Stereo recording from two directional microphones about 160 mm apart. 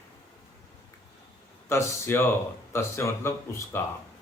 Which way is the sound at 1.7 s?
15° left (ahead or behind).